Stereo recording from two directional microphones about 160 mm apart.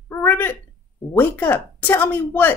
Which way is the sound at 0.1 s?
10° left (ahead or behind).